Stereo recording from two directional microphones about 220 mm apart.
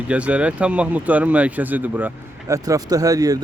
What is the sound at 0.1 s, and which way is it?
Speech, 5° right (ahead or behind).